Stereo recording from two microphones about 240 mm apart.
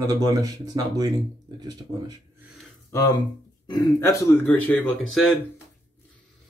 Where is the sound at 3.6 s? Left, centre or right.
Centre.